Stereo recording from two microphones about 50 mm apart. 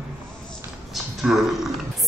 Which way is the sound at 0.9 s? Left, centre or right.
Centre.